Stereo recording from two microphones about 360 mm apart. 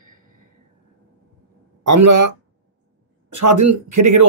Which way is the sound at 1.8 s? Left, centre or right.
Right.